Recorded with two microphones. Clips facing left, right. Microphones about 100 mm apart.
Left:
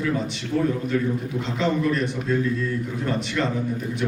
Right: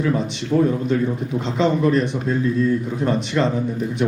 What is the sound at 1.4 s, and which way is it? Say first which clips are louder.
A man's voice: right 6 dB; 20° right (ahead or behind).